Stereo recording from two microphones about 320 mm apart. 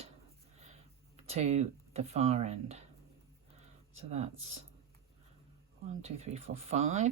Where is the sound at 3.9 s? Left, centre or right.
Centre.